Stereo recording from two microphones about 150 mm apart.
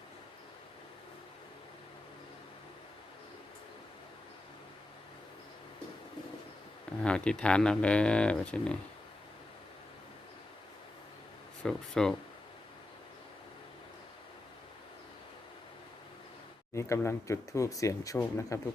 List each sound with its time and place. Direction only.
7.0 s speech: 5° left (ahead or behind)
11.6 s speech: 5° left (ahead or behind)
16.7 s speech: 20° left (ahead or behind)